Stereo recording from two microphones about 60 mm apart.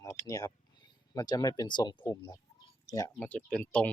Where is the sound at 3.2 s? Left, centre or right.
Centre.